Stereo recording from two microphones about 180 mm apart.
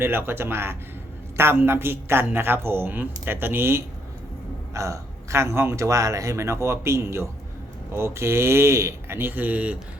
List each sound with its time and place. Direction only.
0.0 s speech: 10° right (ahead or behind)